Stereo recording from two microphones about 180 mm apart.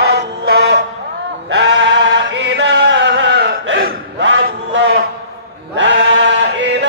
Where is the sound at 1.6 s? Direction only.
85° right.